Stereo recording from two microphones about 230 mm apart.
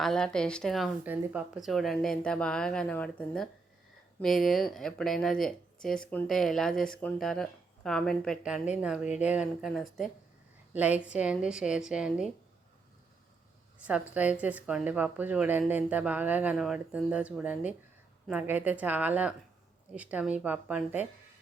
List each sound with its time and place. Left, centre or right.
0.0 s speech: centre
13.7 s speech: centre